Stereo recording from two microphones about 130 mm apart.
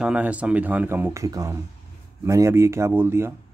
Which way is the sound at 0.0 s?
10° right (ahead or behind).